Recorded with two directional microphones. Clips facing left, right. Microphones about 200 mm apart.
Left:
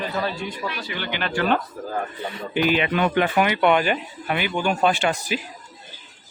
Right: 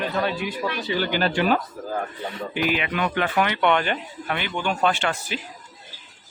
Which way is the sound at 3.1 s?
15° left (ahead or behind).